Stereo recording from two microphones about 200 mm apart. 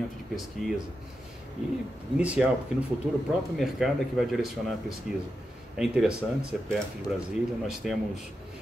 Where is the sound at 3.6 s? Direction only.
Centre (ahead or behind).